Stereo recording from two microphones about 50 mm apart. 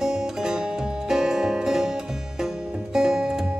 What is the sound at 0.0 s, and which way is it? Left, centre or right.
Music, centre.